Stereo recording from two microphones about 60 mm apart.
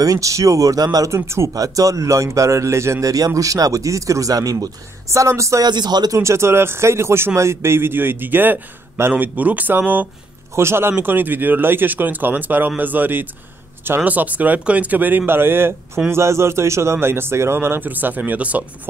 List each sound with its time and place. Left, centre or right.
0.0 s speech: right
1.1 s speech: right
1.5 s speech: right
6.1 s speech: right
10.5 s speech: right
16.1 s speech: right